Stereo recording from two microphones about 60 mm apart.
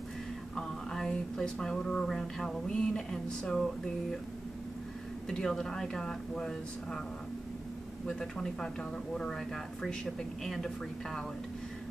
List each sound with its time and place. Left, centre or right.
0.6 s speech: centre
5.3 s speech: centre
8.2 s speech: centre